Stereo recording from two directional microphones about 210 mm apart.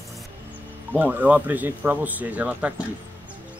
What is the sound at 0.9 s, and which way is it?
Speech, 10° right (ahead or behind).